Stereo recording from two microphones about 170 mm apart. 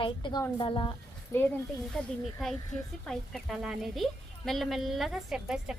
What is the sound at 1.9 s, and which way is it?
Speech, 5° left (ahead or behind).